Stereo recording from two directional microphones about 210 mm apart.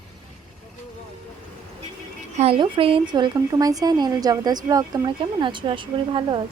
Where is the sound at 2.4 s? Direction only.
25° right (ahead or behind).